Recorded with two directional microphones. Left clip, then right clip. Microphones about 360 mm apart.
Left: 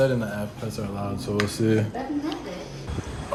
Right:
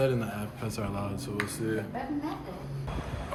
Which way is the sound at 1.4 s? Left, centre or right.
Centre.